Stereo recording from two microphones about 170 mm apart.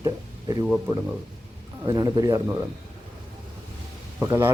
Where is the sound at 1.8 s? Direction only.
25° right (ahead or behind).